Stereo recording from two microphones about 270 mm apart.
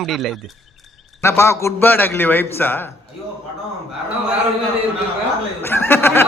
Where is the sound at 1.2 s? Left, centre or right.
Centre.